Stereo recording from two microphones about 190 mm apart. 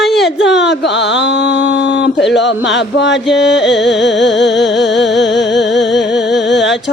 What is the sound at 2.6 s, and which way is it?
Music, 70° left (ahead or behind).